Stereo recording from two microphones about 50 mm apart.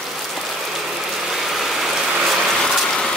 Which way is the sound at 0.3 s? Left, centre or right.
Centre.